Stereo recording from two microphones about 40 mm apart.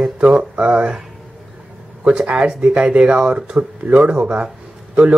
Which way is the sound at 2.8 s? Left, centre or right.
Right.